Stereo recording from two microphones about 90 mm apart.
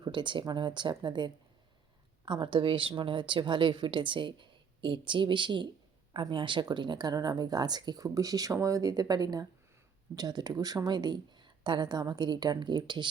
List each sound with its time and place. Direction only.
0.0 s a woman's voice: 60° right (ahead or behind)